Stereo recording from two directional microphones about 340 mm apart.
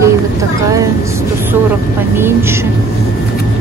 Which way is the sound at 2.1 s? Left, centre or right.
Centre.